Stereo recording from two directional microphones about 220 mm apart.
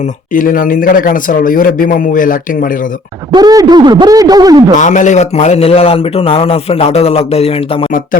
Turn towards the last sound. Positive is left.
turn(degrees=25)  # may be behind; listen again after turning